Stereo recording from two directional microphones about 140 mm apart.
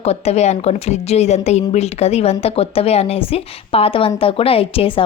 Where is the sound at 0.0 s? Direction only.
50° left (ahead or behind).